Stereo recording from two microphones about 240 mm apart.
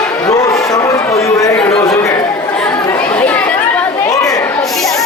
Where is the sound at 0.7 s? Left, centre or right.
Centre.